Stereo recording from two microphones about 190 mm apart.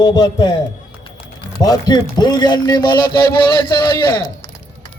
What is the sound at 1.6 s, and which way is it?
Speech, 20° left (ahead or behind).